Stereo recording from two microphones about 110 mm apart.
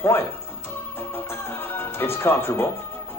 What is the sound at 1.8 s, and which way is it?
Speech, 20° left (ahead or behind).